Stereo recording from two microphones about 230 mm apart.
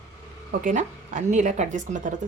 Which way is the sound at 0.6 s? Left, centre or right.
Right.